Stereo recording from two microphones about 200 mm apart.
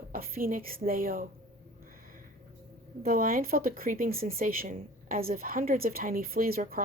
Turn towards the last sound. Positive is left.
turn(degrees=-45)  # may be behind; listen again after turning